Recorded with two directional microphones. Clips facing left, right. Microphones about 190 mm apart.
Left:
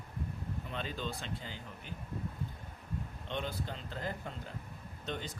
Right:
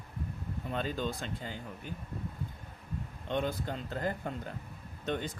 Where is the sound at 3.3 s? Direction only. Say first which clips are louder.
Right 6 dB; 50° right (ahead or behind).